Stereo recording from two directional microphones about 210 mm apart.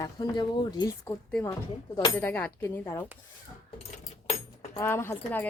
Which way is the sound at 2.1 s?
10° left (ahead or behind).